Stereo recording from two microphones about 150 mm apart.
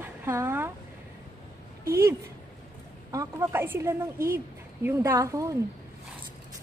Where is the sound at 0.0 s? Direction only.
15° right (ahead or behind).